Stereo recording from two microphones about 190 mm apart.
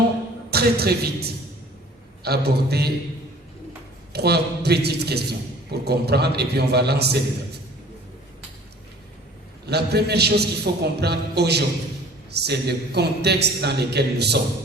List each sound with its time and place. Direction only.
0.5 s a man's voice: 55° right (ahead or behind)
4.1 s a man's voice: 60° right (ahead or behind)
9.6 s a man's voice: 60° right (ahead or behind)